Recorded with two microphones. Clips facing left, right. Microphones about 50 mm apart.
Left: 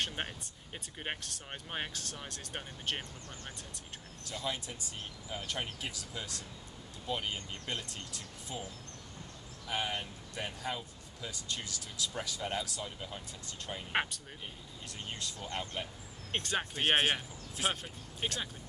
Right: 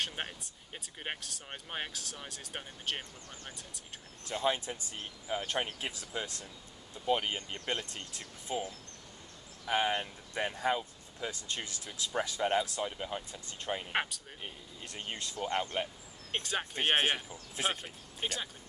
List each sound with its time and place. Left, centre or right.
0.0 s speech: centre
4.3 s speech: right
9.7 s speech: right
16.3 s speech: centre
18.2 s speech: centre